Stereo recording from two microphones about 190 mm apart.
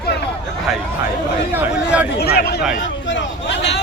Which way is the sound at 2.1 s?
55° left (ahead or behind).